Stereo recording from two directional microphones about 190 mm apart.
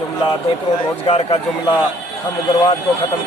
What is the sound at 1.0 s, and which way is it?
Speech, 30° left (ahead or behind).